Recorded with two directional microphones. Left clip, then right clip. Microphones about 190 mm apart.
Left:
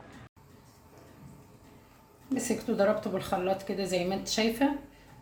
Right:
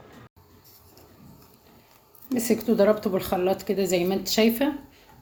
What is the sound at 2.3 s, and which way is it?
A woman's voice, 40° right (ahead or behind).